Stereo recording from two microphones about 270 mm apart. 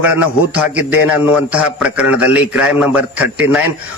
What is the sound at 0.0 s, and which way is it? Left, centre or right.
A man's voice, centre.